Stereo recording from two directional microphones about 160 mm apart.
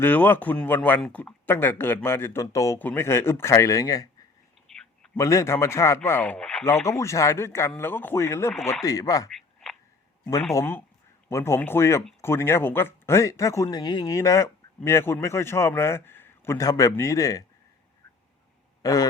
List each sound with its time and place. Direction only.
0.0 s speech: 10° left (ahead or behind)
4.7 s a sound: centre (ahead or behind)
5.1 s speech: 20° left (ahead or behind)
6.7 s speech: 15° left (ahead or behind)
10.5 s speech: 15° left (ahead or behind)
18.8 s a man's voice: 20° left (ahead or behind)